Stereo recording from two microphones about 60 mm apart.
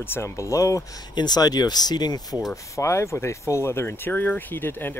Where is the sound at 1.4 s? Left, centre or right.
Left.